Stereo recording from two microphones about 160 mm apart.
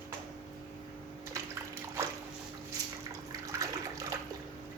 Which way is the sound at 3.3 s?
20° right (ahead or behind).